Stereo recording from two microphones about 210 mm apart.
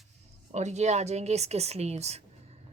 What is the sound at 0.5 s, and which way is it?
Speech, 35° right (ahead or behind).